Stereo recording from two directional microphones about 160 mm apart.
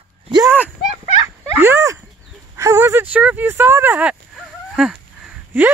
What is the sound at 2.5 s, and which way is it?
Speech, 20° right (ahead or behind).